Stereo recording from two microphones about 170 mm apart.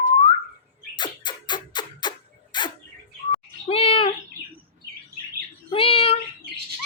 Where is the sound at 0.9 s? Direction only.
25° left (ahead or behind).